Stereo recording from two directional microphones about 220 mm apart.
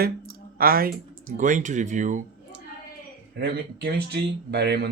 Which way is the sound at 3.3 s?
45° right (ahead or behind).